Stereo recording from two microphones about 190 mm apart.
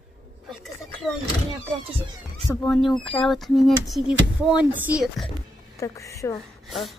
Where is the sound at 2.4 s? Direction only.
5° left (ahead or behind).